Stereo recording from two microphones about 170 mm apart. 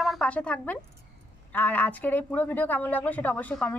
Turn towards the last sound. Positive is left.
turn(degrees=10)  # may be behind; listen again after turning